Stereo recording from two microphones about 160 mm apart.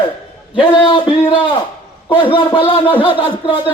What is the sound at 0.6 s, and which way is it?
A man's voice, 30° left (ahead or behind).